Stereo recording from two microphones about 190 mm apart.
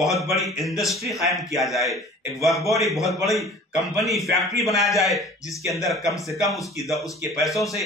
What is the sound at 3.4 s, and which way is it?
Speech, centre (ahead or behind).